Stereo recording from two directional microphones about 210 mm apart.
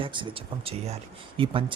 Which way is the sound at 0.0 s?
25° right (ahead or behind).